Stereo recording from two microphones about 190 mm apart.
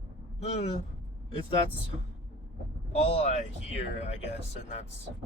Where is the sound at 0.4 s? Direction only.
35° left (ahead or behind).